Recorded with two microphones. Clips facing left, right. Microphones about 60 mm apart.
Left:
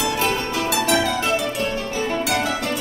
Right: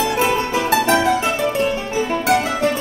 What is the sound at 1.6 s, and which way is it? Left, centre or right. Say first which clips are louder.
Music: right 4 dB; centre.